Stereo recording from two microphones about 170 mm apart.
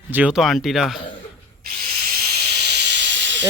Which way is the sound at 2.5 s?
80° right.